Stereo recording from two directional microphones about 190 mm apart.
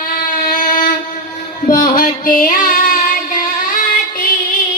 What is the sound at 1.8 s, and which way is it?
Singing, 45° left (ahead or behind).